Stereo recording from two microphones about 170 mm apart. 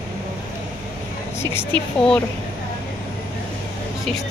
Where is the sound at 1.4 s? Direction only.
15° left (ahead or behind).